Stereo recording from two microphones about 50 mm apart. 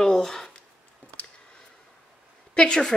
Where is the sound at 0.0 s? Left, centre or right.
Centre.